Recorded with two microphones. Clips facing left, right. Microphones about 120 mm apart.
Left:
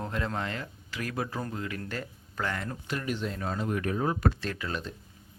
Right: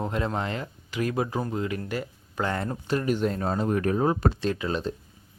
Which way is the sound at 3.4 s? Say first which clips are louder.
Right 6 dB; 35° right (ahead or behind).